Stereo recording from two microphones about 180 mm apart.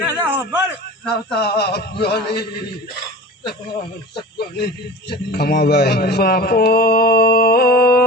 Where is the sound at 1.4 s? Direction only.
65° left (ahead or behind).